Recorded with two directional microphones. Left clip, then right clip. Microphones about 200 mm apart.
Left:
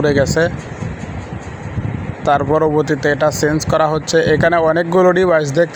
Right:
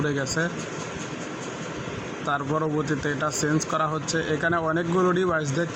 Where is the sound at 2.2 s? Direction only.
25° left (ahead or behind).